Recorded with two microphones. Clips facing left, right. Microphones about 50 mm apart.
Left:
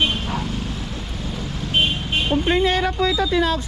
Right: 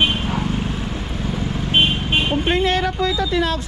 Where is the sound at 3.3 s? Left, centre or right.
Right.